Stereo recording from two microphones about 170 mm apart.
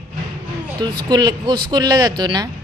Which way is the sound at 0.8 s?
25° right (ahead or behind).